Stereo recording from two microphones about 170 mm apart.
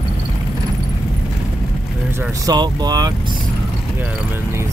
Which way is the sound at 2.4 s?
25° right (ahead or behind).